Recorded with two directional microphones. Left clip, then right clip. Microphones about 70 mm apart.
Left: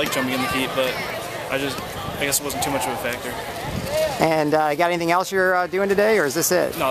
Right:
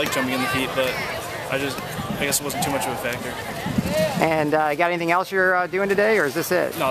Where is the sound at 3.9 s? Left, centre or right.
Right.